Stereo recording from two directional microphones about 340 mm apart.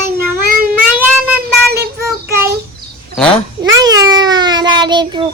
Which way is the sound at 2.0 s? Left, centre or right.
Centre.